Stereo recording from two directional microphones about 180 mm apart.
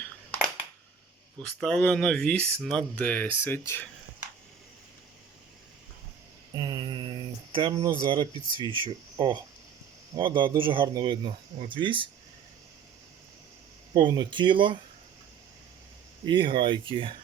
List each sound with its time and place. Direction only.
1.4 s speech: 5° left (ahead or behind)
6.5 s mantra: 25° right (ahead or behind)
7.5 s speech: 25° right (ahead or behind)
13.9 s speech: 25° right (ahead or behind)
16.2 s speech: 25° right (ahead or behind)